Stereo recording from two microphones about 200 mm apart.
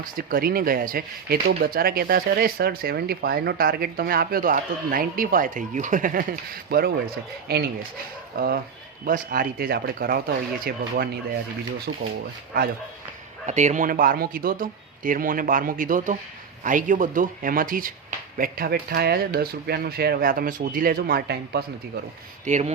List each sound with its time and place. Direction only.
0.0 s speech: 45° right (ahead or behind)
13.4 s speech: 35° right (ahead or behind); by 21.6 s 50° right (ahead or behind)
22.4 s speech: 35° right (ahead or behind)